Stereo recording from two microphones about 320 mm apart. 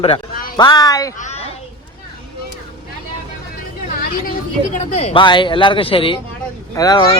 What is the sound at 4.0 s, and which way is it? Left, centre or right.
A woman's voice, left.